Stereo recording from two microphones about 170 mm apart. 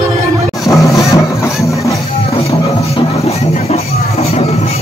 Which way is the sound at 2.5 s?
35° left (ahead or behind).